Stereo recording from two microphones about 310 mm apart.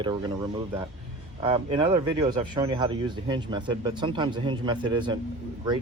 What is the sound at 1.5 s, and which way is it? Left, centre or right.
Speech, centre.